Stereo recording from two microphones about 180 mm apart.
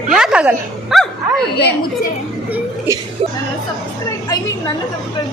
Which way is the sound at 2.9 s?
15° right (ahead or behind).